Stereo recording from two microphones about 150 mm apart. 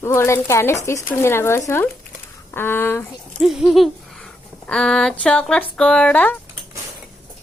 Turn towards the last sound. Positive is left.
turn(degrees=10)  # may be behind; listen again after turning